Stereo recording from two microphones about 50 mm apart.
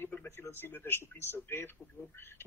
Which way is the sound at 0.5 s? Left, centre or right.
Left.